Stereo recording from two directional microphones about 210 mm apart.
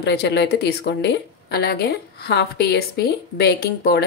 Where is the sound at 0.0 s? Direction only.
55° left (ahead or behind).